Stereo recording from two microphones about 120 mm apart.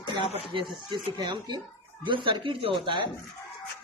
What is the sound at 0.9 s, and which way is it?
Speech, 40° right (ahead or behind).